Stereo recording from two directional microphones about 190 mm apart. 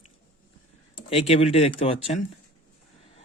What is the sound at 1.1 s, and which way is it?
Speech, 30° left (ahead or behind).